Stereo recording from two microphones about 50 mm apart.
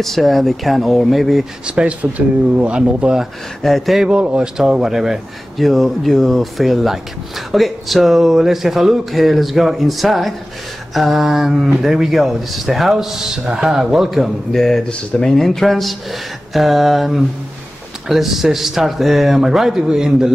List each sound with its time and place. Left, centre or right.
0.0 s speech: centre
1.8 s speech: right
3.6 s speech: centre
4.2 s speech: right
4.6 s speech: centre
14.8 s speech: centre
15.3 s speech: centre